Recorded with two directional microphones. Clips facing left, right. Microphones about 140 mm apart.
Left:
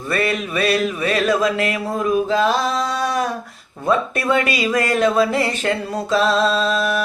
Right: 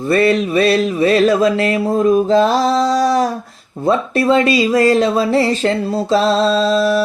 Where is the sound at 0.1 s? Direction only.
35° right (ahead or behind).